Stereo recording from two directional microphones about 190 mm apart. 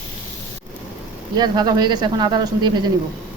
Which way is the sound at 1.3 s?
20° right (ahead or behind).